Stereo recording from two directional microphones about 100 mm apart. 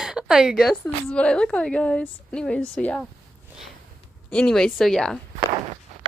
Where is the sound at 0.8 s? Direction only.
10° left (ahead or behind).